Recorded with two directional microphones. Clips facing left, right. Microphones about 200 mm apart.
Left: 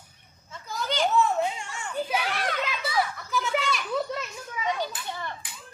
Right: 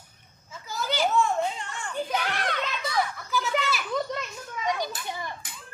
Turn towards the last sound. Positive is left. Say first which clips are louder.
# right 1 dB
turn(degrees=-15)  # may be behind; listen again after turning